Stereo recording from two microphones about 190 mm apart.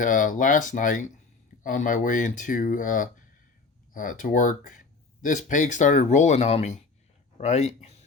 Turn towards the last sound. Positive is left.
turn(degrees=35)  # may be behind; listen again after turning